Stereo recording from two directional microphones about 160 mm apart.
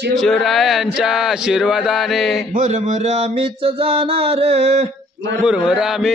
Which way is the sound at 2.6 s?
50° right (ahead or behind).